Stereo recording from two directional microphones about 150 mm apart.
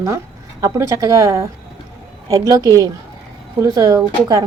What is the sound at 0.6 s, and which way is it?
A woman's voice, 20° right (ahead or behind).